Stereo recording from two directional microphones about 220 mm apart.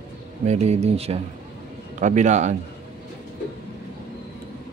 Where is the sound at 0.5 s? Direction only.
30° right (ahead or behind).